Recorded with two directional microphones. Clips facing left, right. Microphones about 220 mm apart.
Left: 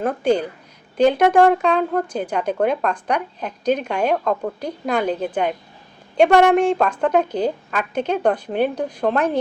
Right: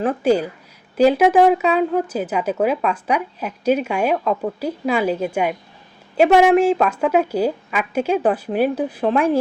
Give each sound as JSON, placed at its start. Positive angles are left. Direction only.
{"t": 0.0, "sound": "speech", "side_deg": -5}